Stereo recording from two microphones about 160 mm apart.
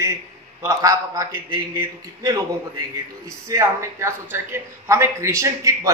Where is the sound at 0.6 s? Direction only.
20° right (ahead or behind).